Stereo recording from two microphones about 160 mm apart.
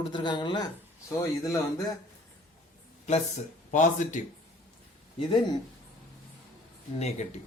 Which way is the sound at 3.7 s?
50° left (ahead or behind).